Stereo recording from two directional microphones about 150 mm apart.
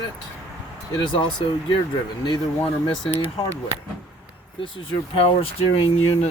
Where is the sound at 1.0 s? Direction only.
35° left (ahead or behind).